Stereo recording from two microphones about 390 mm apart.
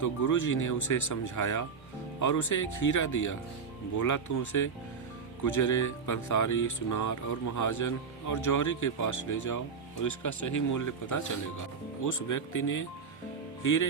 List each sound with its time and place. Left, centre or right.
0.0 s speech: left